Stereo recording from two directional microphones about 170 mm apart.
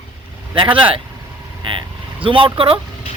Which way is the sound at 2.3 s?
30° right (ahead or behind).